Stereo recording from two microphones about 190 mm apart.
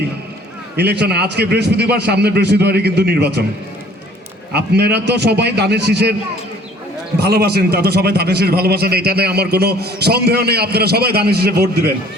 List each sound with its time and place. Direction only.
0.8 s a man's voice: 60° right (ahead or behind)
4.5 s a man's voice: 60° right (ahead or behind)
7.2 s a man's voice: 60° right (ahead or behind)